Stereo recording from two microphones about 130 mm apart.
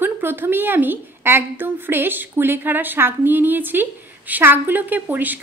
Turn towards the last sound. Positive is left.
turn(degrees=-15)  # may be behind; listen again after turning